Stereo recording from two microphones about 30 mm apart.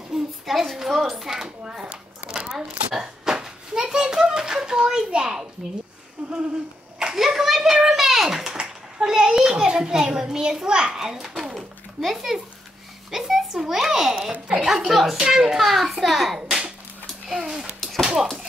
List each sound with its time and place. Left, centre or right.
0.1 s a sound: right
0.5 s a woman's voice: centre
1.9 s a sound: right
4.4 s a child's voice: right
7.2 s a child's voice: centre; by 11.0 s right
11.0 s speech: centre
13.1 s a child's voice: centre
15.6 s a child's voice: centre
16.3 s a sound: right
17.3 s a child's voice: right